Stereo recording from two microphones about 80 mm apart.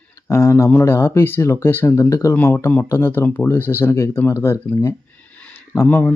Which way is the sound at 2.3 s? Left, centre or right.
Left.